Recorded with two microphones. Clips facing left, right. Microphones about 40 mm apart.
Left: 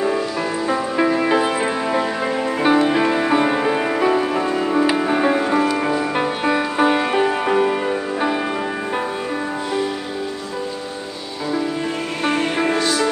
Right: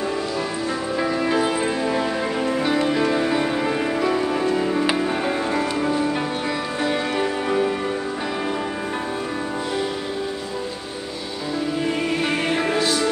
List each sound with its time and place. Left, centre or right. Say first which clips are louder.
0.7 s music: left 7 dB; left
12.3 s music: left 3 dB; centre